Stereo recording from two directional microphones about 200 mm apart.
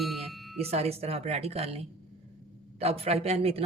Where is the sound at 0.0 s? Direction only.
Centre (ahead or behind).